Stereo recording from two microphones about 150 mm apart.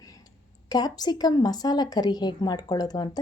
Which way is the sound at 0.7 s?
25° left (ahead or behind).